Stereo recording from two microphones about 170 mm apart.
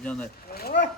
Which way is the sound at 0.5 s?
70° left (ahead or behind).